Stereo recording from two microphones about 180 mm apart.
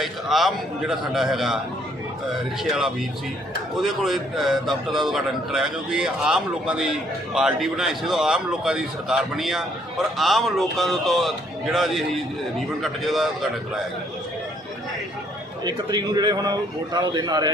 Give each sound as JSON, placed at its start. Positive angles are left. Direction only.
{"t": 0.0, "sound": "a man's voice", "side_deg": 0}
{"t": 2.6, "sound": "a man's voice", "side_deg": 0}
{"t": 15.6, "sound": "a man's voice", "side_deg": -20}